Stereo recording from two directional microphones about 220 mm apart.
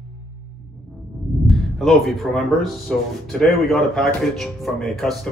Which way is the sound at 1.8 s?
Centre (ahead or behind).